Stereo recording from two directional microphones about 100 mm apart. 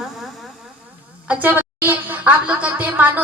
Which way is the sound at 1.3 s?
20° right (ahead or behind).